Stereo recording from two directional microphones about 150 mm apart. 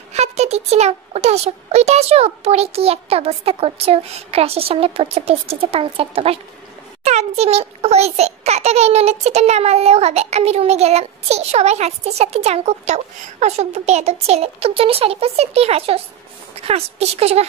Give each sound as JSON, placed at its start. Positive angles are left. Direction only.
{"t": 0.1, "sound": "a child's voice", "side_deg": -45}